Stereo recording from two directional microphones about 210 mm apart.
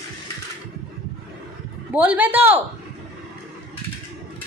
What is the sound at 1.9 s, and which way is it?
Speech, 5° right (ahead or behind).